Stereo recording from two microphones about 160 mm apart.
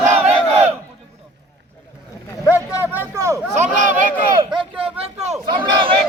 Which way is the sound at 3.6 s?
50° right (ahead or behind).